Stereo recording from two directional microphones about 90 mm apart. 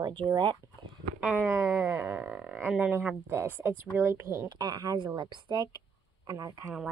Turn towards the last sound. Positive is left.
turn(degrees=-35)  # may be behind; listen again after turning